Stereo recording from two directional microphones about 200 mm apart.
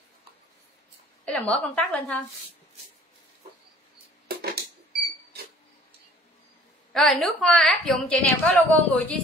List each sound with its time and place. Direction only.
1.2 s a woman's voice: 5° left (ahead or behind)
4.3 s a sound: 50° right (ahead or behind)
6.9 s a woman's voice: centre (ahead or behind)